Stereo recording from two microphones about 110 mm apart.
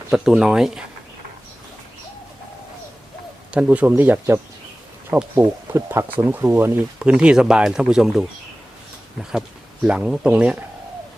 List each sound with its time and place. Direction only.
0.1 s speech: 5° right (ahead or behind)
3.5 s speech: 10° right (ahead or behind)
9.8 s speech: 10° right (ahead or behind)